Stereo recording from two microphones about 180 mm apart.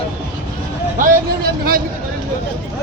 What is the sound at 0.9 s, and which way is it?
Speech, 50° right (ahead or behind).